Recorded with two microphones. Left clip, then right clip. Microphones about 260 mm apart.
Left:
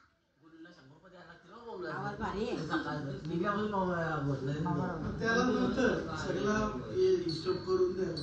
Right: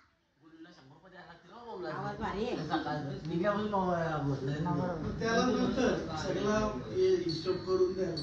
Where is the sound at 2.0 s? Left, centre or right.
Right.